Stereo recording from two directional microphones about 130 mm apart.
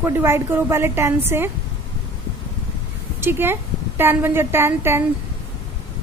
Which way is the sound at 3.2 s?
15° right (ahead or behind).